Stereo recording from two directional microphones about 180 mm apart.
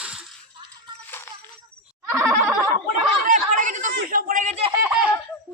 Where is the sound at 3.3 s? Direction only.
45° right (ahead or behind).